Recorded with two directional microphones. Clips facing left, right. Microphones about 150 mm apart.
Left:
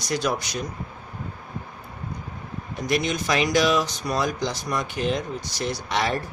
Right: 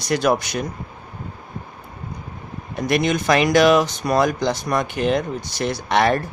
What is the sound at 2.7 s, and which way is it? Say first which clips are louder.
Speech: right 5 dB; 60° right (ahead or behind).